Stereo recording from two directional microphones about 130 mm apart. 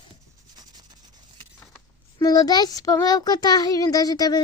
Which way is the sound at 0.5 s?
35° right (ahead or behind).